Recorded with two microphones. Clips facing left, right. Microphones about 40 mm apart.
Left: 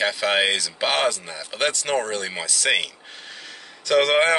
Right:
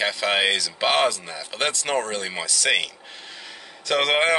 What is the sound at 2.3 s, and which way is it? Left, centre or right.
Speech, centre.